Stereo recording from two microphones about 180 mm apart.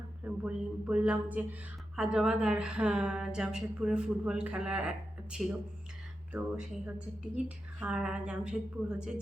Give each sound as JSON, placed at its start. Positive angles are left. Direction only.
{"t": 0.3, "sound": "a woman's voice", "side_deg": -5}